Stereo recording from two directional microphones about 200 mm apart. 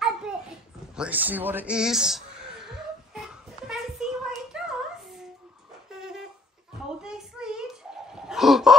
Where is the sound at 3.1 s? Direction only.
Centre (ahead or behind).